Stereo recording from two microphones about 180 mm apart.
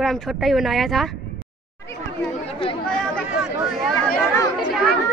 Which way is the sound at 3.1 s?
Centre (ahead or behind).